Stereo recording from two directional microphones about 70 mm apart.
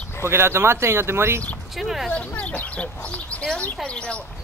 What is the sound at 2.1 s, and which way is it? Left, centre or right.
Speech, left.